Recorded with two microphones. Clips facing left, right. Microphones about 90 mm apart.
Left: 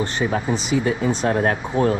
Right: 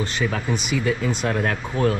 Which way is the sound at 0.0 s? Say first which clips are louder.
Left 3 dB; 25° left (ahead or behind).